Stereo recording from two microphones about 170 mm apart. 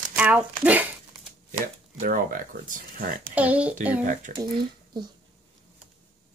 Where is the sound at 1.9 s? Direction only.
55° right (ahead or behind).